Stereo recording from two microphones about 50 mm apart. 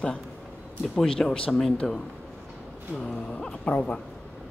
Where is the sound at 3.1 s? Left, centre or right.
Left.